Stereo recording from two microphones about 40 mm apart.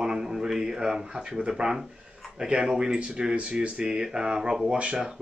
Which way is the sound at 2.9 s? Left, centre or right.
Right.